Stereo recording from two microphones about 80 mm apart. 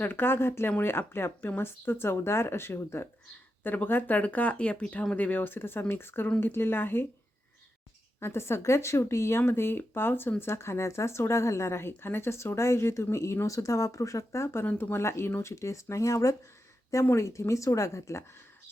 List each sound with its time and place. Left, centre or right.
0.0 s speech: left
8.2 s speech: left
14.6 s speech: left